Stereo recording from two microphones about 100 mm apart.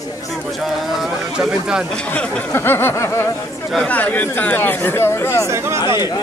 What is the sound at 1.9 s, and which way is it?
Speech, 10° left (ahead or behind).